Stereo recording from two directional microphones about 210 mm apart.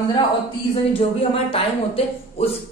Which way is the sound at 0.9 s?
25° left (ahead or behind).